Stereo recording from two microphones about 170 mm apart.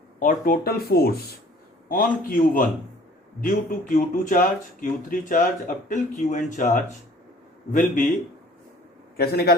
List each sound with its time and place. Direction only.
0.2 s speech: 55° left (ahead or behind)
1.9 s speech: 55° left (ahead or behind)
7.7 s speech: 45° left (ahead or behind)
9.1 s a man's voice: 65° left (ahead or behind)